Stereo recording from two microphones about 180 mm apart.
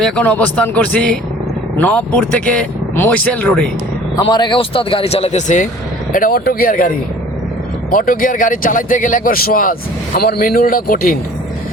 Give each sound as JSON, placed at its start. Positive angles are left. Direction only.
{"t": 0.0, "sound": "speech", "side_deg": 5}
{"t": 4.2, "sound": "speech", "side_deg": 25}
{"t": 6.1, "sound": "a man's voice", "side_deg": 50}